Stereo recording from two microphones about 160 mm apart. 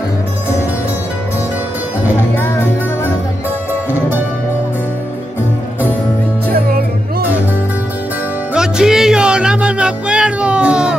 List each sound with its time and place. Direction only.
2.3 s music: 15° left (ahead or behind)
6.5 s music: 70° right (ahead or behind)
8.5 s music: 5° right (ahead or behind)